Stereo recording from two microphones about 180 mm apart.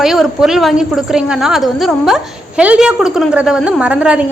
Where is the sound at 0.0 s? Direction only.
Centre (ahead or behind).